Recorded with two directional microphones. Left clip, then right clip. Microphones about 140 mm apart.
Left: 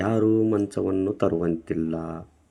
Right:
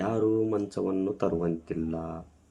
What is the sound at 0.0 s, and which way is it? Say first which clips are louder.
Speech: left 5 dB; 35° left (ahead or behind).